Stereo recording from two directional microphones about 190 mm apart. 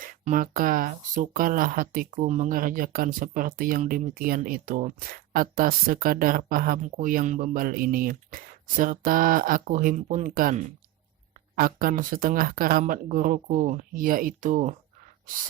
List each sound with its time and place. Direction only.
0.0 s speech: 45° right (ahead or behind)